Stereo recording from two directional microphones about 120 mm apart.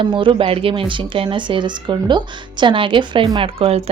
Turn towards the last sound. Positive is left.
turn(degrees=-50)  # may be behind; listen again after turning